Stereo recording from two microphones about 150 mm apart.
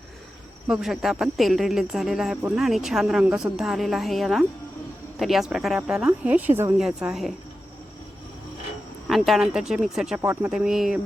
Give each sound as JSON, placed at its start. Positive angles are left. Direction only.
{"t": 0.7, "sound": "a woman's voice", "side_deg": 0}
{"t": 6.7, "sound": "a woman's voice", "side_deg": -5}
{"t": 9.0, "sound": "a woman's voice", "side_deg": 0}
{"t": 10.2, "sound": "speech", "side_deg": -15}
{"t": 10.5, "sound": "a woman's voice", "side_deg": -5}